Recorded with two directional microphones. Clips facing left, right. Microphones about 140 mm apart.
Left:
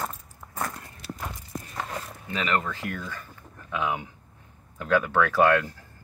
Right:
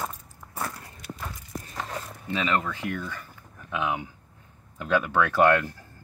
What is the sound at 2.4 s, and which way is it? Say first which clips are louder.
Speech: even; 15° right (ahead or behind).